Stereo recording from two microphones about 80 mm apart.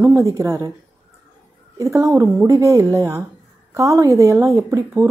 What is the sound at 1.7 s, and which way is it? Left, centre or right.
A woman's voice, right.